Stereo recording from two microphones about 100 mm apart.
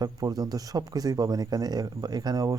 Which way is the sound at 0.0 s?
40° right (ahead or behind).